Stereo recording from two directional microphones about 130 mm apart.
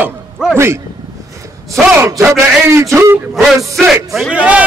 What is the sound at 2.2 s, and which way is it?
A man's voice, 20° right (ahead or behind).